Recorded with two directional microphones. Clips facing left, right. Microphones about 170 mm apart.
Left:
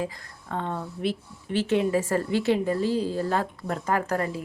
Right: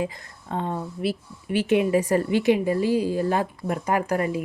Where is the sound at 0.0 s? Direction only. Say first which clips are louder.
Right 3 dB; 20° right (ahead or behind).